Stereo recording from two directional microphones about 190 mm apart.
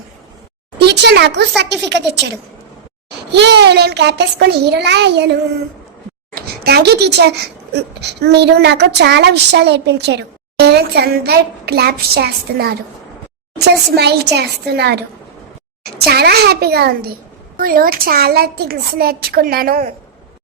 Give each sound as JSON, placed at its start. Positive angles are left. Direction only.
{"t": 0.8, "sound": "speech", "side_deg": -60}
{"t": 3.3, "sound": "speech", "side_deg": -65}
{"t": 13.9, "sound": "a woman's voice", "side_deg": -60}